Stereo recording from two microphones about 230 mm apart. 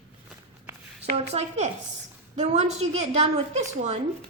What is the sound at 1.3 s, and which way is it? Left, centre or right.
A woman's voice, right.